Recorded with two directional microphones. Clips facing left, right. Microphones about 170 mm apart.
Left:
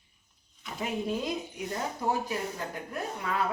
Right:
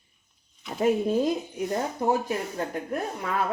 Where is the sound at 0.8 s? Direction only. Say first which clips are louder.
Right 9 dB; 45° right (ahead or behind).